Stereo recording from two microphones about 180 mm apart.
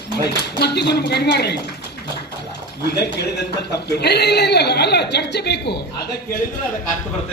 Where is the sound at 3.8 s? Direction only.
65° left (ahead or behind).